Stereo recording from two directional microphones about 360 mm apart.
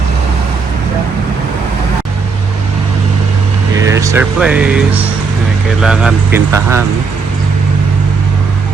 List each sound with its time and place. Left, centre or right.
3.8 s speech: centre